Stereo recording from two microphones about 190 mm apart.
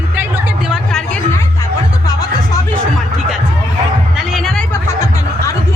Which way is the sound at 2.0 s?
20° left (ahead or behind).